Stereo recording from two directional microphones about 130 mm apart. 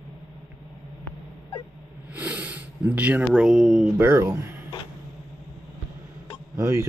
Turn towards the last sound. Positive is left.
turn(degrees=-20)  # may be behind; listen again after turning